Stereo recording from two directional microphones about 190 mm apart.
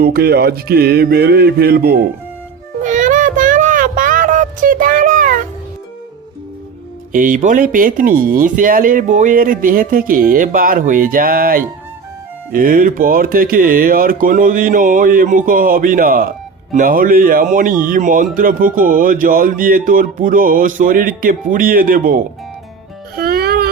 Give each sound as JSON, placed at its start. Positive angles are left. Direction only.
{"t": 0.0, "sound": "music", "side_deg": -55}
{"t": 2.8, "sound": "child singing", "side_deg": -40}
{"t": 7.1, "sound": "a man's voice", "side_deg": -45}
{"t": 23.1, "sound": "music", "side_deg": -50}